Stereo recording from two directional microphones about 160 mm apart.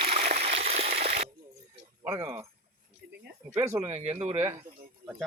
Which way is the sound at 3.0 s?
85° right.